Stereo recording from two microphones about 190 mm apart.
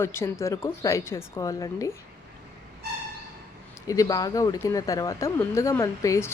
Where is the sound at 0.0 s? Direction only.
15° left (ahead or behind).